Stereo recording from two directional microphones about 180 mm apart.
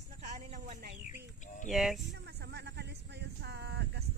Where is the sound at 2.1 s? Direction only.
70° right (ahead or behind).